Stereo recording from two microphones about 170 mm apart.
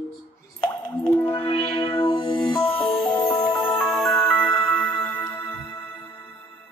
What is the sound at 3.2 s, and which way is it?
Music, 30° left (ahead or behind).